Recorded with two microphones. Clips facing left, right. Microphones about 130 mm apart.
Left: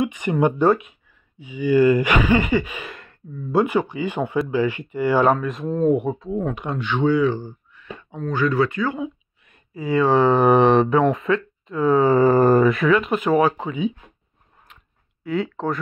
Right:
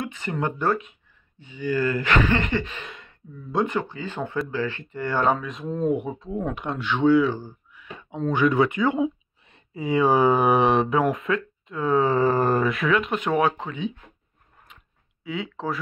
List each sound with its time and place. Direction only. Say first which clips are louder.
0.0 s speech: left 8 dB; 15° left (ahead or behind); by 8.2 s 10° right (ahead or behind)
8.2 s speech: even; 20° right (ahead or behind); by 13.9 s 5° left (ahead or behind)
15.2 s speech: left 6 dB; centre (ahead or behind)